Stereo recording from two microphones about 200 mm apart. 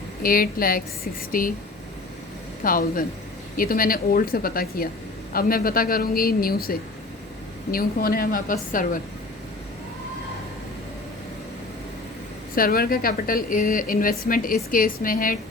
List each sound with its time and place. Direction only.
0.2 s a woman's voice: 45° left (ahead or behind)
2.6 s a woman's voice: 45° left (ahead or behind)
12.5 s a woman's voice: 45° left (ahead or behind)